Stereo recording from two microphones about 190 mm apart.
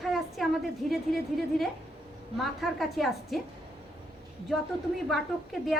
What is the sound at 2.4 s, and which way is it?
A woman's voice, centre (ahead or behind).